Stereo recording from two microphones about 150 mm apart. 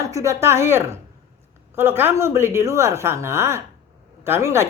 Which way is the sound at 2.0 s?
15° right (ahead or behind).